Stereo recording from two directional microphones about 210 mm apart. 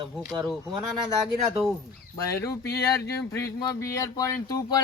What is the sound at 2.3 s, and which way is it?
Speech, 15° left (ahead or behind).